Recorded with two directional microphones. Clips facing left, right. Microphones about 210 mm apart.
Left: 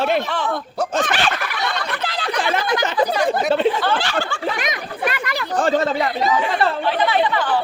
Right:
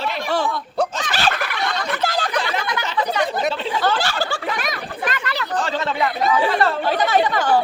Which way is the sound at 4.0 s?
40° right (ahead or behind).